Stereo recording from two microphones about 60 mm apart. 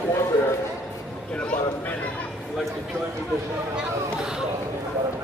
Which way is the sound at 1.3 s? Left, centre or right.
Left.